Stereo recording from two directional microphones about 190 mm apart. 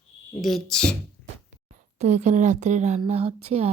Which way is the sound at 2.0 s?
40° right (ahead or behind).